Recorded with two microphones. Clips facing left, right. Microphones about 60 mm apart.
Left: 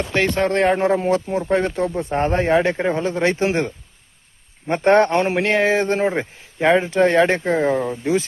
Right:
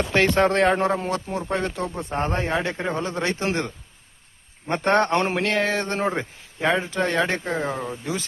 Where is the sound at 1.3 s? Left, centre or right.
Left.